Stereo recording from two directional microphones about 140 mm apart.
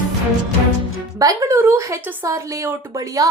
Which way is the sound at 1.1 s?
25° right (ahead or behind).